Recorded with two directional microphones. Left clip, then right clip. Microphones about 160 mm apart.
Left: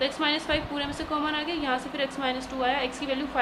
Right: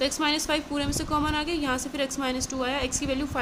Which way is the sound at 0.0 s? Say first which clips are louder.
Right 1 dB; 50° right (ahead or behind).